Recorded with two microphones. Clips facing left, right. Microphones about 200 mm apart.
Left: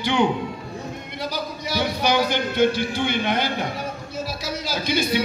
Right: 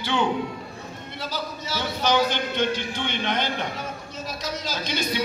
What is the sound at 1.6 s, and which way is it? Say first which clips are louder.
A man's voice: left 3 dB; 15° left (ahead or behind).